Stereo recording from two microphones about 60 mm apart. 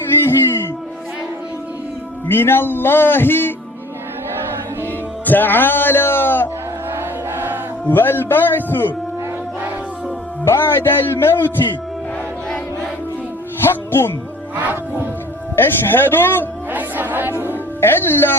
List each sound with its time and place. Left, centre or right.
0.3 s a sound: left
2.2 s speech: left
5.2 s speech: left
6.9 s crowd: right
7.9 s speech: left
10.4 s speech: left
13.6 s music: left
14.5 s speech: right
15.5 s speech: left
16.7 s music: right
17.7 s speech: left